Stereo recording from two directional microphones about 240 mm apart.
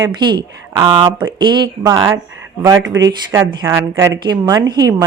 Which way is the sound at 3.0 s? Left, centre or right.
Centre.